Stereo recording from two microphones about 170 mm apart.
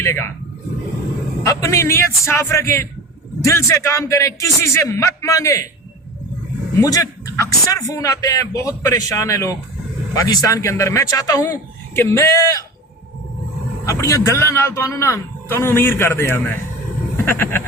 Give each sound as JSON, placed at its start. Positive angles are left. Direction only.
{"t": 0.0, "sound": "a man's voice", "side_deg": 15}
{"t": 1.5, "sound": "a man's voice", "side_deg": 20}
{"t": 6.7, "sound": "speech", "side_deg": 20}
{"t": 13.8, "sound": "a man's voice", "side_deg": 15}